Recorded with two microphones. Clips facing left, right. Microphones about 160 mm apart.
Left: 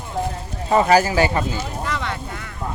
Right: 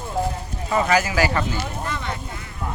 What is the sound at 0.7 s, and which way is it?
Speech, 35° left (ahead or behind).